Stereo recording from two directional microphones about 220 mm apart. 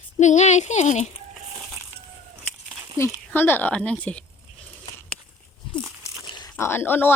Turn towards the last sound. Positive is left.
turn(degrees=10)  # may be behind; listen again after turning